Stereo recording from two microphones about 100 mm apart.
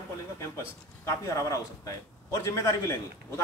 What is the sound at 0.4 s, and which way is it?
Speech, 30° left (ahead or behind).